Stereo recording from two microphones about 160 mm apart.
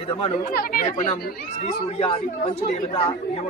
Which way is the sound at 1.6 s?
35° left (ahead or behind).